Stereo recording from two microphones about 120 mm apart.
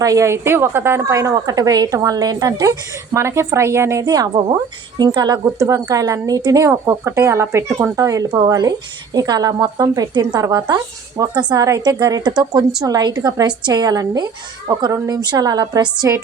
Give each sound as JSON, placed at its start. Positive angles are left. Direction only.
{"t": 0.0, "sound": "a woman's voice", "side_deg": -25}